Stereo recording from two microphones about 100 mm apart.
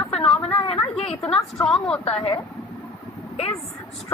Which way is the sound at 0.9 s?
90° left.